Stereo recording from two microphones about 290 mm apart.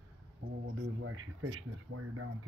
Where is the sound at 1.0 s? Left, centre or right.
Right.